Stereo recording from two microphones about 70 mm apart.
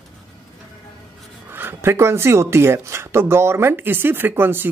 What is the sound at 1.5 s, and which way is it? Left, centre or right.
Speech, right.